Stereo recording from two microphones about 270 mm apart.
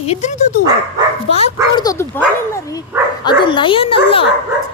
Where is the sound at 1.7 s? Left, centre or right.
Centre.